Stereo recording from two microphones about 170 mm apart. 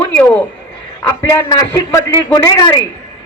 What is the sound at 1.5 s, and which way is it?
A man's voice, 20° left (ahead or behind).